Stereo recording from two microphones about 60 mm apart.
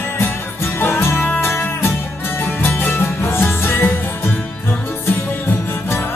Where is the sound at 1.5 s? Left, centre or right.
Left.